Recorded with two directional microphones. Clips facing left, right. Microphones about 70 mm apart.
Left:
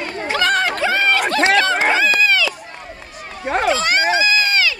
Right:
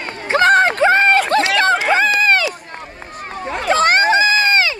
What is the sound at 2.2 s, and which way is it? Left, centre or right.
Run, right.